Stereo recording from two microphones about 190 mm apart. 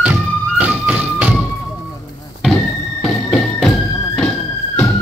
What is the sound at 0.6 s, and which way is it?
Music, 5° right (ahead or behind).